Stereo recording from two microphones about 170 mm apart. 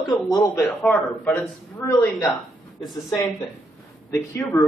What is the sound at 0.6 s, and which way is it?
Speech, 10° left (ahead or behind).